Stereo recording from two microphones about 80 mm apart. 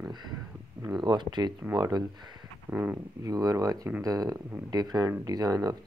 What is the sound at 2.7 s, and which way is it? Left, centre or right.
Speech, centre.